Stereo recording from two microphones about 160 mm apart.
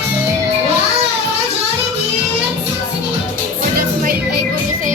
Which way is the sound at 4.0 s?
60° right (ahead or behind).